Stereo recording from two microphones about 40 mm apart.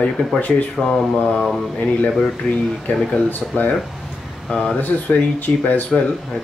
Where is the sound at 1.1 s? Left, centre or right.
Left.